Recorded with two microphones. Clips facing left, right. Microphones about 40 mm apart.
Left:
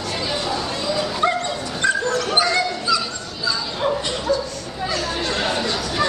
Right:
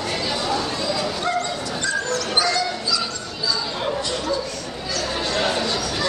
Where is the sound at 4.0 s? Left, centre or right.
Left.